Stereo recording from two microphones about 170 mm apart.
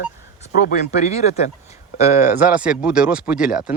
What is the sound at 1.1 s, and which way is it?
Speech, 40° left (ahead or behind).